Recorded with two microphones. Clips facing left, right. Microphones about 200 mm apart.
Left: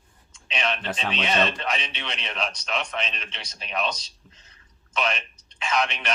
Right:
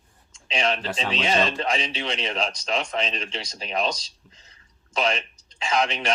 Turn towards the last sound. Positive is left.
turn(degrees=-30)  # may be behind; listen again after turning